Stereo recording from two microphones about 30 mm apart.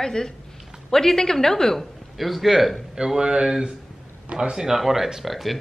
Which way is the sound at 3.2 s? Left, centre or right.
Right.